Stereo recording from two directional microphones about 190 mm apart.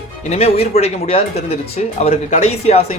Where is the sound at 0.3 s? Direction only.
35° left (ahead or behind).